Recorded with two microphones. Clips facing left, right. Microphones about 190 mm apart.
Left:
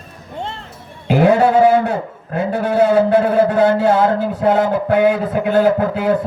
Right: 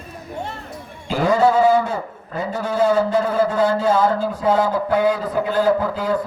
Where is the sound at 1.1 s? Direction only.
65° left (ahead or behind).